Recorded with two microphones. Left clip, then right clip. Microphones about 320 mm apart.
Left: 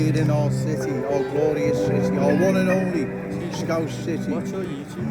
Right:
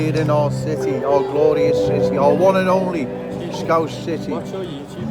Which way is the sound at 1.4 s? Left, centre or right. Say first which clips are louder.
Right 5 dB; centre.